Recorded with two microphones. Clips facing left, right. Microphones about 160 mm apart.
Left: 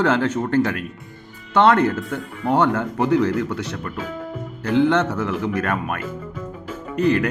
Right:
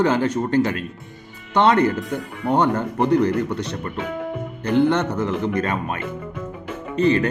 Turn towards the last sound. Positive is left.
turn(degrees=-25)  # may be behind; listen again after turning